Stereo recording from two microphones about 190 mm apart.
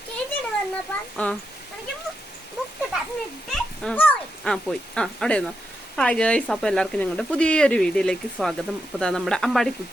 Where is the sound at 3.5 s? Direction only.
5° left (ahead or behind).